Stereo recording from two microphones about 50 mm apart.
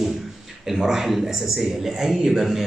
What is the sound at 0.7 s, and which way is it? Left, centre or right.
A man's voice, centre.